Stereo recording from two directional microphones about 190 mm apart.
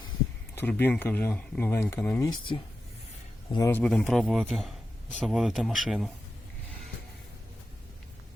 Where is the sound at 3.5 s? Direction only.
15° left (ahead or behind).